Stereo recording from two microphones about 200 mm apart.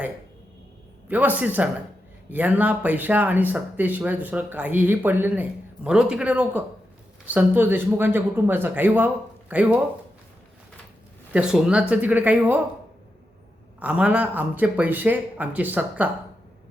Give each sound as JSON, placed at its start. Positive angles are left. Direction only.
{"t": 1.0, "sound": "speech", "side_deg": -10}
{"t": 11.3, "sound": "speech", "side_deg": -5}
{"t": 13.7, "sound": "speech", "side_deg": -5}